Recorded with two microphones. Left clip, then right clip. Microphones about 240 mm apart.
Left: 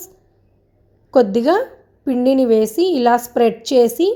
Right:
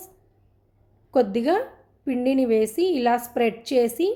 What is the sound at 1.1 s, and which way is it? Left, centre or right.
A woman's voice, centre.